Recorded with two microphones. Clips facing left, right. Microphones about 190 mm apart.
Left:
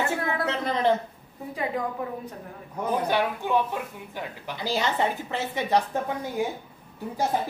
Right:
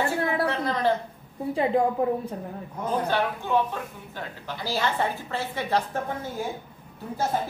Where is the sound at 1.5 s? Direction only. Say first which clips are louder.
Right 7 dB; 35° right (ahead or behind).